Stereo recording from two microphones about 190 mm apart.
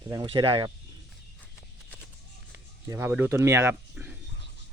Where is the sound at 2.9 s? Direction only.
10° right (ahead or behind).